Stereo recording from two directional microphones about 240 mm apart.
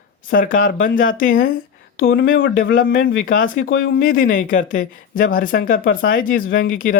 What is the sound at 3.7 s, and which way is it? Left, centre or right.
Speech, left.